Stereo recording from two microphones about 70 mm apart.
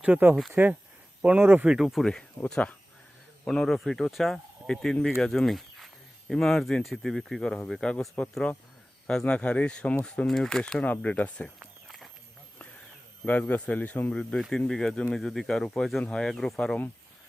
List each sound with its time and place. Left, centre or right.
0.5 s speech: right
1.6 s speech: centre
2.4 s speech: left
3.4 s speech: centre
9.0 s speech: centre
10.2 s speech: centre
10.8 s speech: left
11.9 s walk: centre
13.2 s speech: left
14.1 s speech: centre